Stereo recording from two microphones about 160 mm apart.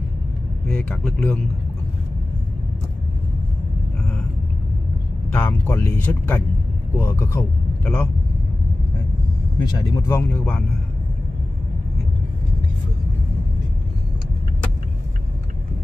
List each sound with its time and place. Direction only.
0.8 s speech: 10° left (ahead or behind)
5.3 s speech: 10° left (ahead or behind)
9.6 s speech: 25° left (ahead or behind); by 10.6 s 10° left (ahead or behind)